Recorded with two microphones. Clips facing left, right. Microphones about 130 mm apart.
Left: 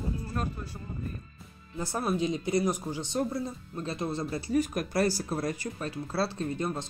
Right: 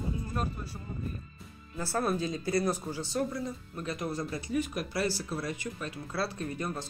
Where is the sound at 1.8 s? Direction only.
15° left (ahead or behind).